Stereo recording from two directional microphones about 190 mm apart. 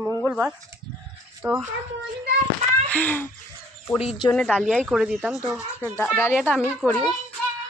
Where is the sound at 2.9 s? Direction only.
10° left (ahead or behind).